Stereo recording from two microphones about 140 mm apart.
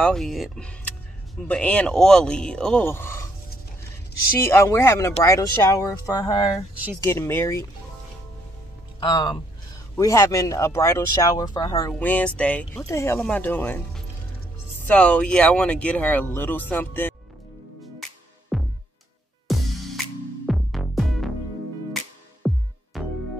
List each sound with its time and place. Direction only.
0.0 s speech: centre (ahead or behind); by 3.3 s 20° left (ahead or behind)
4.5 s speech: 20° left (ahead or behind)
9.0 s speech: 30° left (ahead or behind)
11.9 s speech: 10° left (ahead or behind)
14.9 s speech: 10° left (ahead or behind)
18.5 s music: centre (ahead or behind)
22.4 s music: 5° right (ahead or behind)